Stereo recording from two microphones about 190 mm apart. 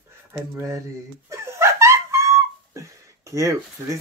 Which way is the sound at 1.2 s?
15° right (ahead or behind).